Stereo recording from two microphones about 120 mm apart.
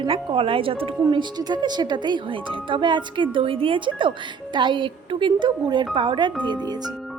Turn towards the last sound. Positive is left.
turn(degrees=-35)  # may be behind; listen again after turning